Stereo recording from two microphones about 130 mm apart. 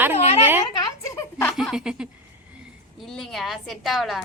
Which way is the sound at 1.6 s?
5° right (ahead or behind).